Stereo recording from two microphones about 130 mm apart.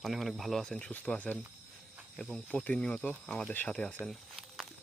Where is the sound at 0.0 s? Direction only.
Centre (ahead or behind).